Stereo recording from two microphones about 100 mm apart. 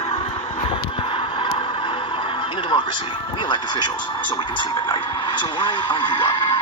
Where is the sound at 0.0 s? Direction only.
70° left (ahead or behind).